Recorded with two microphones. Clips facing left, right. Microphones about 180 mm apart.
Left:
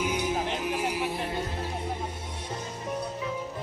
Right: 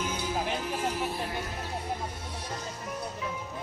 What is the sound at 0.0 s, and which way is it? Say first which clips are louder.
Music: left 3 dB; 15° left (ahead or behind).